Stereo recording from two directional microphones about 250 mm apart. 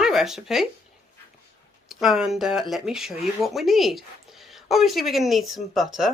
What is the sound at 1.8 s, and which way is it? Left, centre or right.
Speech, centre.